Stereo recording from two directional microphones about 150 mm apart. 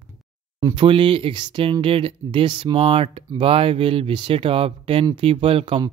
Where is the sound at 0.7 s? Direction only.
35° right (ahead or behind).